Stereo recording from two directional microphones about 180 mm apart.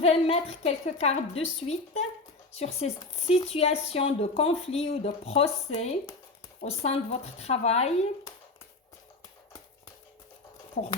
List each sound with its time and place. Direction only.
0.0 s speech: 35° left (ahead or behind)